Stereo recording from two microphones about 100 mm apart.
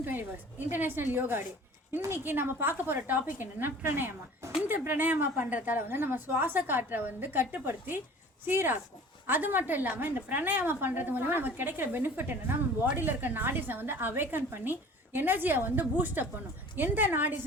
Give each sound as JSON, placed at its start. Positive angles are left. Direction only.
{"t": 0.0, "sound": "a woman's voice", "side_deg": -20}